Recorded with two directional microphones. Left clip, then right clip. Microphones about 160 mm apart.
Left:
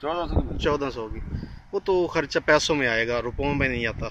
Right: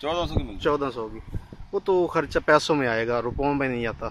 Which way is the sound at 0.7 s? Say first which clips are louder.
Right 1 dB; 5° left (ahead or behind).